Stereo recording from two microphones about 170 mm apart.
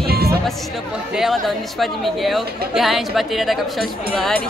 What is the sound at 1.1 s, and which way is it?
Speech, centre (ahead or behind).